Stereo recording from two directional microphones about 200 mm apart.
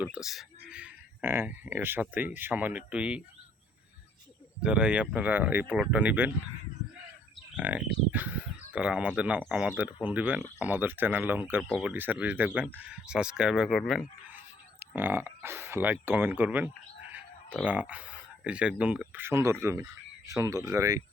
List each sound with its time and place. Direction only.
0.0 s speech: 5° right (ahead or behind)
4.6 s speech: 5° right (ahead or behind)
7.5 s speech: 5° right (ahead or behind)